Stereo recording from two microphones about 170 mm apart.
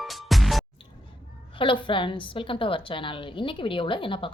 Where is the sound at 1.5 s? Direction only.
30° left (ahead or behind).